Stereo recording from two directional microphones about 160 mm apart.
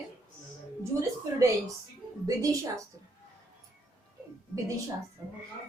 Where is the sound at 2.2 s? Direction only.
20° right (ahead or behind).